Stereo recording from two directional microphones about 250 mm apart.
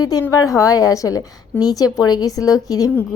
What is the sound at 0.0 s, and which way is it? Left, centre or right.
A woman's voice, centre.